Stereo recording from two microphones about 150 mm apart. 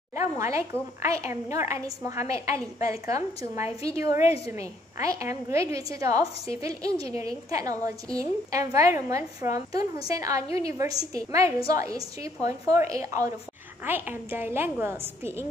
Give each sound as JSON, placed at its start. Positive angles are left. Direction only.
{"t": 0.4, "sound": "a woman's voice", "side_deg": -20}